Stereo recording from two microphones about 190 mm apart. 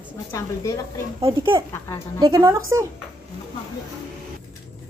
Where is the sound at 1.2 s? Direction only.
25° right (ahead or behind).